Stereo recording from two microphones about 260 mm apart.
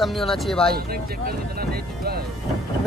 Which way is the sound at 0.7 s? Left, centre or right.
Right.